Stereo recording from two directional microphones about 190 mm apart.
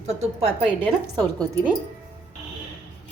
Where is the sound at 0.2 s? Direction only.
30° right (ahead or behind).